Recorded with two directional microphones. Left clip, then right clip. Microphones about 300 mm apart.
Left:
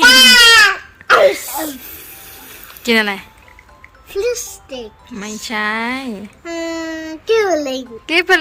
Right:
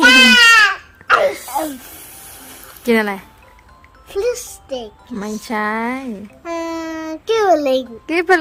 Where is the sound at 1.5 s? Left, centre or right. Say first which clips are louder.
Right 3 dB; centre.